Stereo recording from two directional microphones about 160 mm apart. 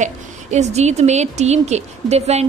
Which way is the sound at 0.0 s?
45° right (ahead or behind).